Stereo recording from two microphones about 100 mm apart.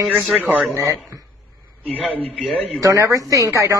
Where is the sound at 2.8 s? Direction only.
35° right (ahead or behind).